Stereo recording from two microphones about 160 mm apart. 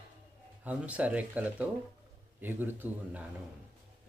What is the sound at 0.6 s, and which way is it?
Speech, 10° right (ahead or behind).